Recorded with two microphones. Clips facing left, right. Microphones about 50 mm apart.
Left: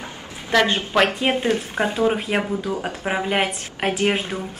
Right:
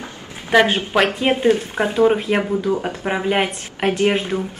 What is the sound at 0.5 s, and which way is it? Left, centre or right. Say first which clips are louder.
Speech: right 4 dB; centre.